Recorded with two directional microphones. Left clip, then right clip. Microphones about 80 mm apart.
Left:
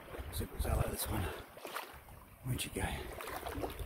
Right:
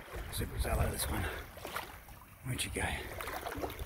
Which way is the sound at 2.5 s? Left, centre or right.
Left.